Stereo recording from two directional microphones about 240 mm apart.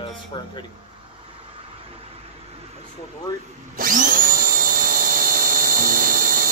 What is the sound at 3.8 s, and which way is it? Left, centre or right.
Tools, right.